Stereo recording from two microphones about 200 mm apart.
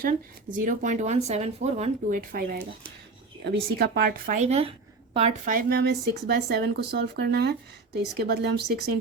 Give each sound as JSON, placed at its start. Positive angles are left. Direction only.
{"t": 0.0, "sound": "speech", "side_deg": -45}
{"t": 5.5, "sound": "speech", "side_deg": -45}